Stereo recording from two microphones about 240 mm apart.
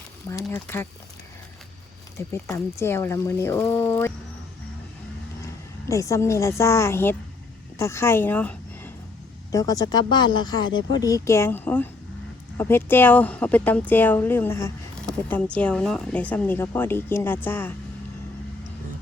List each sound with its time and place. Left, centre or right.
0.3 s speech: centre
2.1 s speech: centre
5.9 s speech: centre